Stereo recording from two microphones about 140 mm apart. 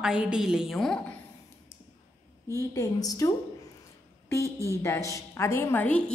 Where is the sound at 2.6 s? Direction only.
25° left (ahead or behind).